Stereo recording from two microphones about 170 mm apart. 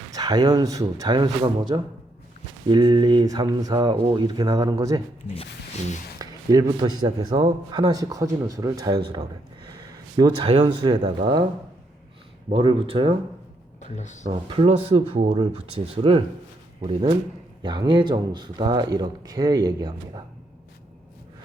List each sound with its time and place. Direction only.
0.1 s speech: 20° right (ahead or behind)
6.1 s speech: 20° right (ahead or behind)
10.2 s speech: 25° right (ahead or behind)
12.5 s speech: 30° right (ahead or behind)
13.8 s speech: 45° left (ahead or behind)
14.3 s speech: 35° right (ahead or behind)
16.8 s speech: 30° right (ahead or behind)